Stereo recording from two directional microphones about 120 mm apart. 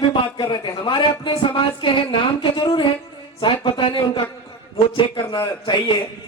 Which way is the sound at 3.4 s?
45° left (ahead or behind).